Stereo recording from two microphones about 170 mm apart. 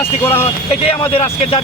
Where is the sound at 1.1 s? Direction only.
35° left (ahead or behind).